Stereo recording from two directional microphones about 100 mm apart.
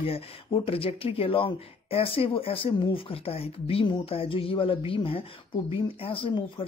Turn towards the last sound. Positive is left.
turn(degrees=60)  # may be behind; listen again after turning